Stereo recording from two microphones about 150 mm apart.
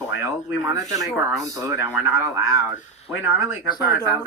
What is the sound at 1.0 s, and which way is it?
Speech, centre (ahead or behind).